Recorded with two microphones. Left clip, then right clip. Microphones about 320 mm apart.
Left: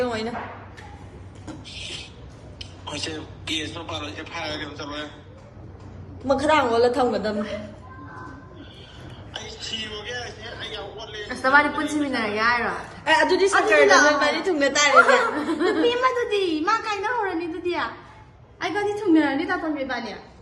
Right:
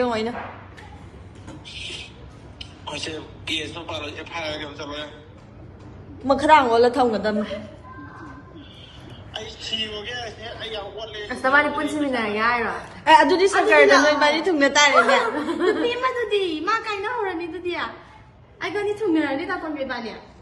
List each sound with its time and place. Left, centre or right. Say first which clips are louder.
0.0 s a sound: right 3 dB; right
2.6 s a man's voice: even; centre
6.2 s a woman's voice: right 4 dB; right
9.3 s a man's voice: right 3 dB; centre
13.1 s a woman's voice: right 4 dB; right
15.4 s a man's voice: even; centre
15.9 s a woman's voice: left 1 dB; centre